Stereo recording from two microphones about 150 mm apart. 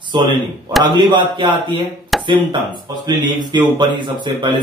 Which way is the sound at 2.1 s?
Centre (ahead or behind).